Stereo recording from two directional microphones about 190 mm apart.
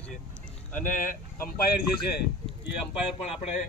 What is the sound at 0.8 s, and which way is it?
Speech, 45° left (ahead or behind).